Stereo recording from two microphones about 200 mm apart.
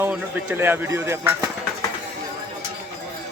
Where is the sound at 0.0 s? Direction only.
10° right (ahead or behind).